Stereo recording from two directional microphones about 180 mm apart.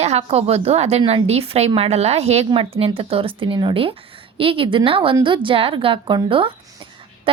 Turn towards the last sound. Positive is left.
turn(degrees=-30)  # may be behind; listen again after turning